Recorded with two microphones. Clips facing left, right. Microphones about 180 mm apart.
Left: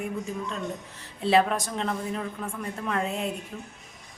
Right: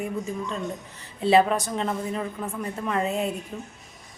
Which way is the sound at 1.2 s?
Centre (ahead or behind).